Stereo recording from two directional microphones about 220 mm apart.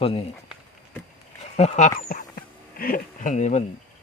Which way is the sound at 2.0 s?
35° left (ahead or behind).